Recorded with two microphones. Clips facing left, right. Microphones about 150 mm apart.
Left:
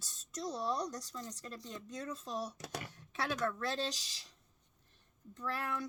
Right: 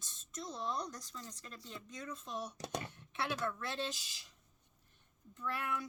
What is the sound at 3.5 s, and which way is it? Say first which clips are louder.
Speech: left 3 dB; 35° left (ahead or behind).